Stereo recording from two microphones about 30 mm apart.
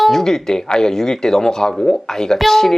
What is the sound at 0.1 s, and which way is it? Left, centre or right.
Speech, centre.